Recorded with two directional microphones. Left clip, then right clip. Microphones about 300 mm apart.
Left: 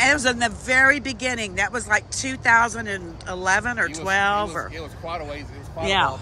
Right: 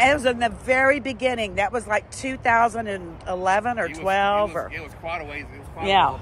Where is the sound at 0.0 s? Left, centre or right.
Centre.